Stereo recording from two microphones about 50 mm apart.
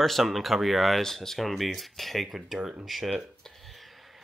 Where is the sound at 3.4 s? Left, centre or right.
Centre.